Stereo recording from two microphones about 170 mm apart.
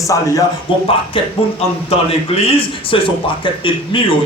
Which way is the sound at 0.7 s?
30° left (ahead or behind).